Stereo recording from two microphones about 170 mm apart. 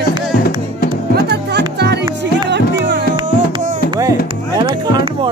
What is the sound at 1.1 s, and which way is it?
Music, 80° right.